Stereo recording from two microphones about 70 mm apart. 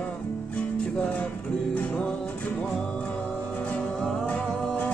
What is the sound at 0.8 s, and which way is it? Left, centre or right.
Music, centre.